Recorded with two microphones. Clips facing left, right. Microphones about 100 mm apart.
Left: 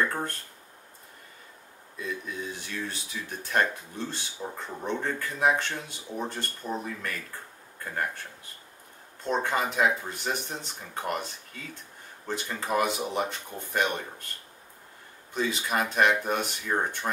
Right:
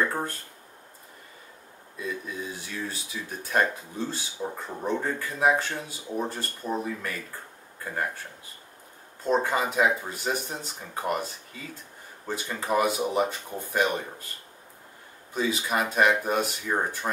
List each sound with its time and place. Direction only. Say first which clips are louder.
0.0 s speech: right 1 dB; 5° right (ahead or behind)
2.0 s speech: right 1 dB; 5° right (ahead or behind)
15.3 s speech: right 1 dB; 5° right (ahead or behind)